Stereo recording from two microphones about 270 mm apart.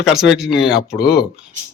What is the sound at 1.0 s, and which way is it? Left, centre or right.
Speech, left.